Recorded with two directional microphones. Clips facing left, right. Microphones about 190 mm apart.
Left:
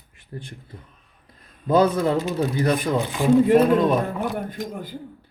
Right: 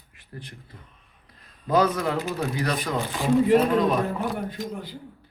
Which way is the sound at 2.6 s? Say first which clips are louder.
Left 5 dB; 50° left (ahead or behind).